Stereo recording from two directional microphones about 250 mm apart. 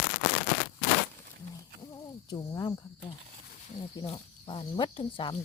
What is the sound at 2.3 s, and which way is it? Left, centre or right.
Speech, centre.